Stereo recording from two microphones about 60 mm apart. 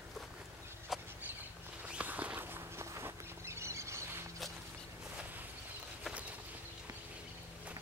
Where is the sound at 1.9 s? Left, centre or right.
Right.